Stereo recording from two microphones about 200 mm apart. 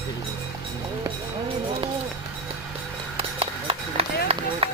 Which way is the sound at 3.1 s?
30° right (ahead or behind).